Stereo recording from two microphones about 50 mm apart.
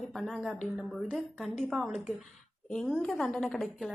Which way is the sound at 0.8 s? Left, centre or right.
Centre.